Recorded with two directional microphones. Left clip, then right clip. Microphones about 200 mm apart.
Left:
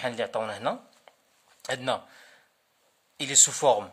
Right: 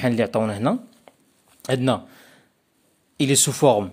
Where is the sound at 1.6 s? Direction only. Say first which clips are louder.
Right 7 dB; 25° right (ahead or behind).